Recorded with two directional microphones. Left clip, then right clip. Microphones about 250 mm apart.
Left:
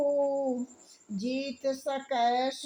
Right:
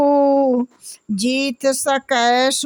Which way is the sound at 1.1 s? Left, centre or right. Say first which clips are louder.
Right 14 dB; right.